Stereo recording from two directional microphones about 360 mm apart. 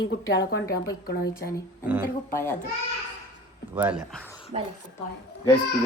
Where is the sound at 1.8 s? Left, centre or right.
Centre.